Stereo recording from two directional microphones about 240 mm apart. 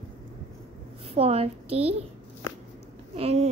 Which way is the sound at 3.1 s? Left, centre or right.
Right.